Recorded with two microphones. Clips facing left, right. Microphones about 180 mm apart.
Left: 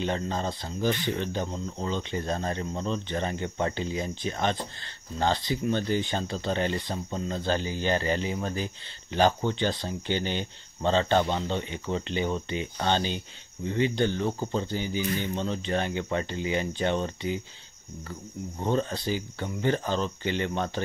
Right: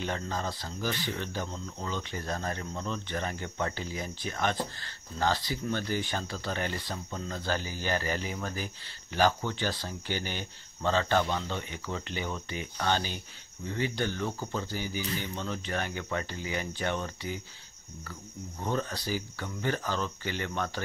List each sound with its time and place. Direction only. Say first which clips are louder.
0.0 s speech: left 4 dB; 25° left (ahead or behind)
18.6 s speech: left 5 dB; 25° left (ahead or behind)